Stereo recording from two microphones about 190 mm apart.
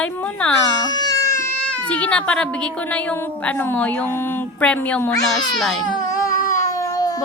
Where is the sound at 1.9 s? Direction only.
5° left (ahead or behind).